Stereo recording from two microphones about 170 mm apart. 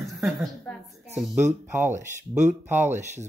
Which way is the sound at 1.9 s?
45° right (ahead or behind).